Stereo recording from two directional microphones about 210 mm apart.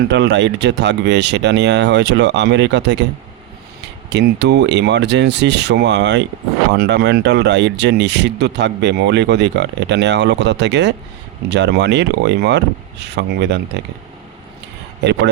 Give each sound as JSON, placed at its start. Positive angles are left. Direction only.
{"t": 0.1, "sound": "speech", "side_deg": -55}
{"t": 4.1, "sound": "speech", "side_deg": -55}